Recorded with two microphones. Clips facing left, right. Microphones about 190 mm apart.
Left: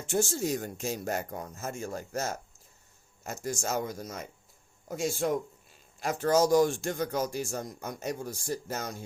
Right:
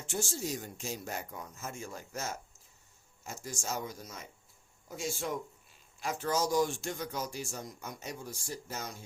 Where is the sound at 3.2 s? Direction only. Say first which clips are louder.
Left 8 dB; 50° left (ahead or behind).